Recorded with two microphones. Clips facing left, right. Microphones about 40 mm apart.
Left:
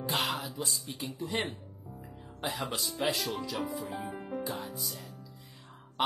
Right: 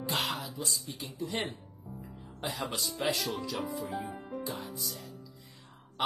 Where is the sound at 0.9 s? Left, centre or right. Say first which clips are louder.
Left 4 dB; left.